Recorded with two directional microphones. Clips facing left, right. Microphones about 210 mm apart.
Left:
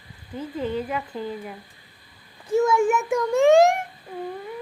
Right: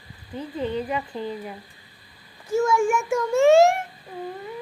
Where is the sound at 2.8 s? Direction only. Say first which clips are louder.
Left 1 dB; 20° left (ahead or behind).